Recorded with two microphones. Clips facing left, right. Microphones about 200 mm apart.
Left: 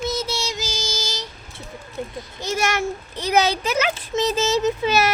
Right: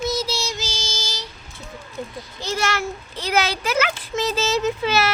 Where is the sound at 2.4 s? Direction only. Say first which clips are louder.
Left 1 dB; 20° left (ahead or behind).